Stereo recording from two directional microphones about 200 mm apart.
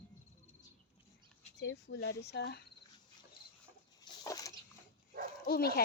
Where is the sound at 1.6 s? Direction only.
60° left (ahead or behind).